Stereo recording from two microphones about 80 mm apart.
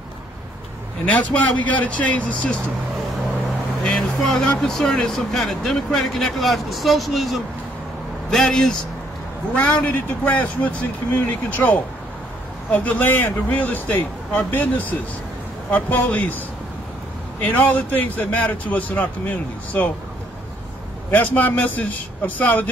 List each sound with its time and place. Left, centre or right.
1.0 s a man's voice: centre
3.8 s speech: centre
9.5 s a man's voice: centre
21.1 s a man's voice: left